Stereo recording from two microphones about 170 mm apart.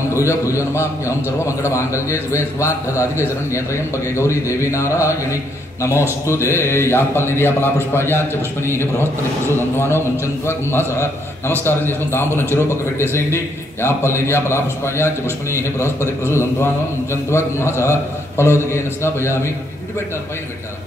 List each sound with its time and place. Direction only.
0.1 s a man's voice: 15° left (ahead or behind)
9.8 s a man's voice: 15° left (ahead or behind)
12.1 s a man's voice: 15° left (ahead or behind)